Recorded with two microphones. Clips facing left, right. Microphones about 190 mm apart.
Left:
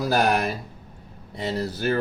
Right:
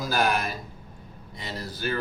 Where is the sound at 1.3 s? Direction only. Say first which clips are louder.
Left 9 dB; 60° left (ahead or behind).